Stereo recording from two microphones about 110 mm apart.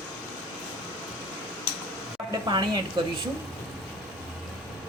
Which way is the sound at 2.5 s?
40° right (ahead or behind).